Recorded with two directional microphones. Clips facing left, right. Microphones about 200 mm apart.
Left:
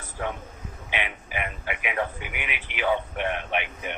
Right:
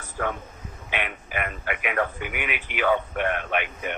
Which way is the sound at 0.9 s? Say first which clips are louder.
Right 1 dB; 50° right (ahead or behind).